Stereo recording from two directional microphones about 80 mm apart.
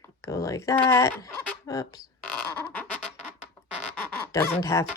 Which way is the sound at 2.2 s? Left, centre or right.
Centre.